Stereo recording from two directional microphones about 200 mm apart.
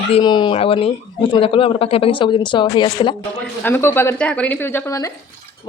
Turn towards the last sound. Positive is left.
turn(degrees=15)  # may be behind; listen again after turning